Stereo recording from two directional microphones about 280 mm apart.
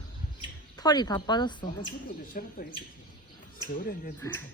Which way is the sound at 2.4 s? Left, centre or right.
Left.